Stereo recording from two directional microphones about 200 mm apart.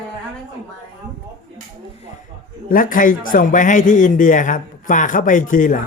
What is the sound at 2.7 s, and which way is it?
A man's voice, 45° left (ahead or behind).